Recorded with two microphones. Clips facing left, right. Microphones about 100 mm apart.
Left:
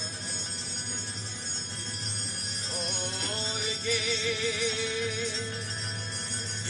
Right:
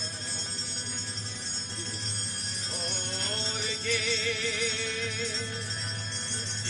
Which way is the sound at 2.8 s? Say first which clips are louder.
Even; 15° left (ahead or behind).